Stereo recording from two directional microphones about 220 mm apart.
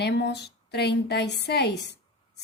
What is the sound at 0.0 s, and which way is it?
Speech, 50° left (ahead or behind).